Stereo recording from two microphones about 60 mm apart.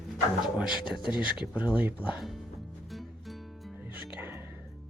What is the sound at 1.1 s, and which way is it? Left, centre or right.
Speech, centre.